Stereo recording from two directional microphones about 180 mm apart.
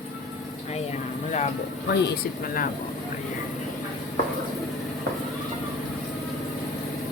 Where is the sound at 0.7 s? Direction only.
35° left (ahead or behind).